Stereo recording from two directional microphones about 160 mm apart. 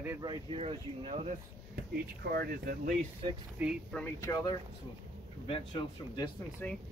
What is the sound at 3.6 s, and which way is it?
Speech, 10° right (ahead or behind).